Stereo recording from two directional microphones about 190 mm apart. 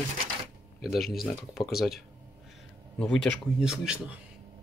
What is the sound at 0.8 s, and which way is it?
Speech, centre (ahead or behind).